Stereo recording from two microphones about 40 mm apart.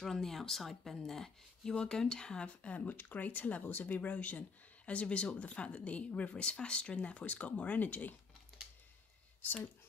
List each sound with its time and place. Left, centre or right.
0.0 s speech: centre; by 8.1 s left